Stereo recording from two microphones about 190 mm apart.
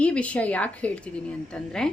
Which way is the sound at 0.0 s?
5° left (ahead or behind).